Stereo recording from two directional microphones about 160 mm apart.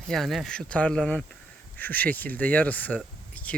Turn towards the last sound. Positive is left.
turn(degrees=10)  # may be behind; listen again after turning